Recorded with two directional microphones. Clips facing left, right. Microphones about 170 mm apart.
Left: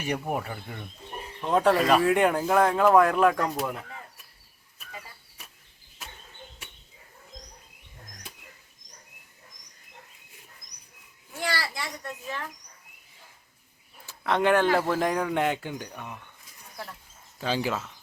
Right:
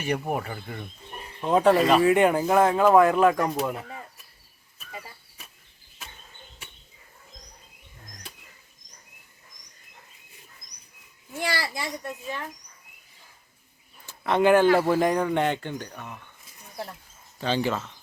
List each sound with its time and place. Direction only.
0.0 s speech: centre (ahead or behind)
11.4 s a child's voice: 20° right (ahead or behind)
14.1 s speech: 5° right (ahead or behind); by 16.3 s 15° left (ahead or behind)
17.4 s speech: 5° left (ahead or behind)